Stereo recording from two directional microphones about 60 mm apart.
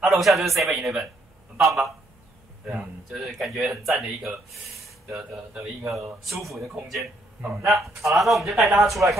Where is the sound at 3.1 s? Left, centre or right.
Centre.